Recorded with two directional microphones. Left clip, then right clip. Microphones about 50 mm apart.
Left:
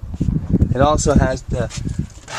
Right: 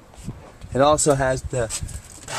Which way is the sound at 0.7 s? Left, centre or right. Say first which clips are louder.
Left 1 dB; centre.